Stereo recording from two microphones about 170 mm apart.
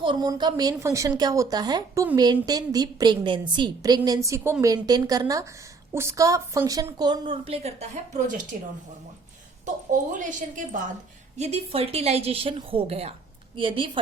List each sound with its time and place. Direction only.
0.0 s a woman's voice: 25° right (ahead or behind)
10.1 s a woman's voice: 50° right (ahead or behind); by 14.0 s 30° right (ahead or behind)